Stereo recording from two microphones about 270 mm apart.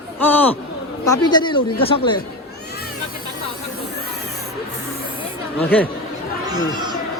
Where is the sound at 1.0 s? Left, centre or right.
Centre.